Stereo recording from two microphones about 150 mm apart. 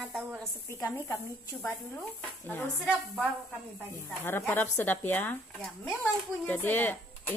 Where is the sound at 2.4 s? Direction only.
10° left (ahead or behind).